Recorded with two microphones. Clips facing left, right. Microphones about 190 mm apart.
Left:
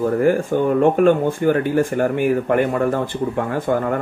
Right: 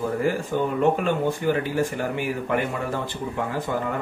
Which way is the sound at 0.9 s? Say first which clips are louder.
Left 8 dB; 50° left (ahead or behind).